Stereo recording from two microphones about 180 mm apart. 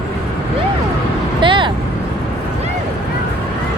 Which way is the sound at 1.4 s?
25° right (ahead or behind).